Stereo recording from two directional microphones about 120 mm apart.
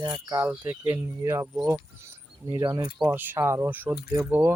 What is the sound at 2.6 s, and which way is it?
Speech, 35° right (ahead or behind).